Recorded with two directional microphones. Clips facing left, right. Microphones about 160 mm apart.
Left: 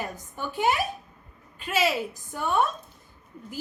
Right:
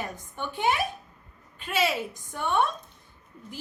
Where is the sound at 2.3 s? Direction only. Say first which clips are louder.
Left 1 dB; 5° left (ahead or behind).